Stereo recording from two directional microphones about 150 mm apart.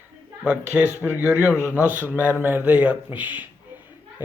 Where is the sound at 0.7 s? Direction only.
10° right (ahead or behind).